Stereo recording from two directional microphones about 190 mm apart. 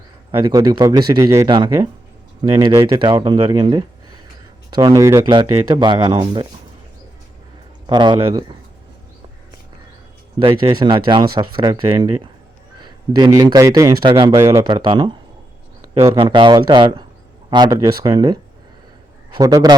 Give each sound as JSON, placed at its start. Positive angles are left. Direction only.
{"t": 0.3, "sound": "speech", "side_deg": -20}
{"t": 7.9, "sound": "speech", "side_deg": -25}
{"t": 10.4, "sound": "a man's voice", "side_deg": -25}
{"t": 19.4, "sound": "speech", "side_deg": -20}